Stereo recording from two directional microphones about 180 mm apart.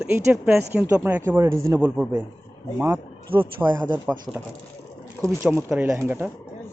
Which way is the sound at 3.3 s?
30° right (ahead or behind).